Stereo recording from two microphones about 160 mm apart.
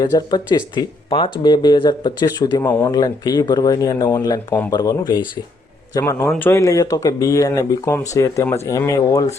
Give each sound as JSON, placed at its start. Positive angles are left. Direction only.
{"t": 0.1, "sound": "a man's voice", "side_deg": 25}